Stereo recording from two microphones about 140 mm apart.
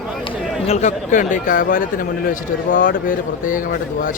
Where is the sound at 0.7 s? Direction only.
55° left (ahead or behind).